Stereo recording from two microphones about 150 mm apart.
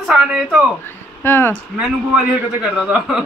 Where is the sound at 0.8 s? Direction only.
15° left (ahead or behind).